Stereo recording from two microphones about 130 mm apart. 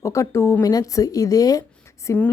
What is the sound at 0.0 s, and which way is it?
Speech, 20° left (ahead or behind).